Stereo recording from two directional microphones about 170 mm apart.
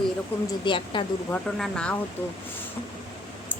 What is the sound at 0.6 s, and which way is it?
Speech, 30° left (ahead or behind).